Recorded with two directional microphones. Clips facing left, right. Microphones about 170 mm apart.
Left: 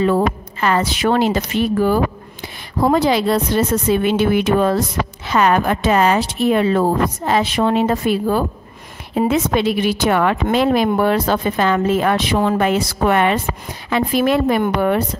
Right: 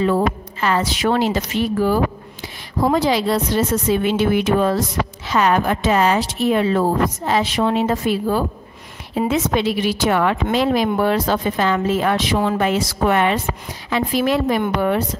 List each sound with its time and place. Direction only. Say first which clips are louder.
0.0 s a woman's voice: left 2 dB; 55° left (ahead or behind)